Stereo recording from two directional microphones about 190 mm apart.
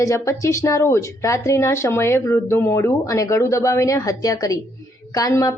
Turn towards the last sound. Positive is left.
turn(degrees=20)  # may be behind; listen again after turning